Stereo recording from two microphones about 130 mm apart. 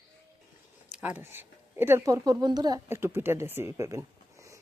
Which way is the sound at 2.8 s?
20° right (ahead or behind).